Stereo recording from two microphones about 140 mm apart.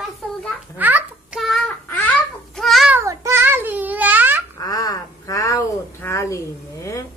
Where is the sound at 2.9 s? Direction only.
20° right (ahead or behind).